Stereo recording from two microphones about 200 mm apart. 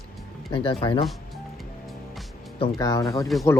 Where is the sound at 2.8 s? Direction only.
15° left (ahead or behind).